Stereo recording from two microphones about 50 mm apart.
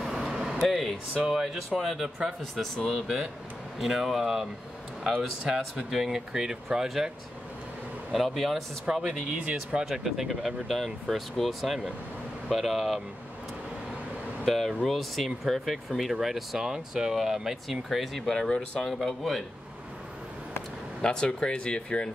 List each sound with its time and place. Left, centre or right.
0.0 s a sound: centre
1.2 s speech: centre
5.4 s speech: centre
5.9 s speech: centre
8.1 s speech: centre
8.8 s speech: centre
9.8 s speech: centre
14.4 s speech: centre
18.5 s speech: left
18.9 s speech: centre
21.0 s speech: centre